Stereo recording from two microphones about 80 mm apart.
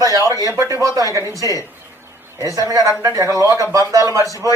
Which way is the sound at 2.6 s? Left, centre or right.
Right.